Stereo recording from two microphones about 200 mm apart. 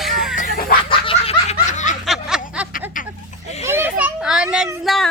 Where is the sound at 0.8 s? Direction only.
25° left (ahead or behind).